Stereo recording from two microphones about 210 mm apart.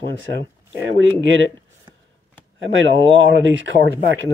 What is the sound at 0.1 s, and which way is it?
Speech, 65° right (ahead or behind).